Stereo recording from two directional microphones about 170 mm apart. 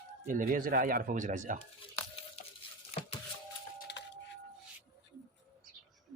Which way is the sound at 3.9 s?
75° left (ahead or behind).